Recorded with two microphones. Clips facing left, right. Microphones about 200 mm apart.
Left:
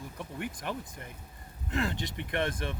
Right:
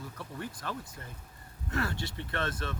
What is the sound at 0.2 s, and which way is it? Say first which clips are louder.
Speech: left 4 dB; 15° left (ahead or behind).